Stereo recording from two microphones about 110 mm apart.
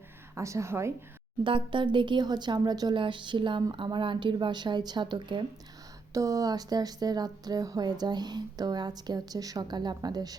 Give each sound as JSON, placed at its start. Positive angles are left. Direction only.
{"t": 0.3, "sound": "a woman's voice", "side_deg": -25}
{"t": 1.5, "sound": "a woman's voice", "side_deg": -50}
{"t": 6.1, "sound": "a woman's voice", "side_deg": -30}